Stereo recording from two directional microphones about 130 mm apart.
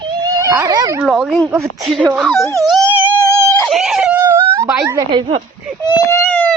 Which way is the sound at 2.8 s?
15° right (ahead or behind).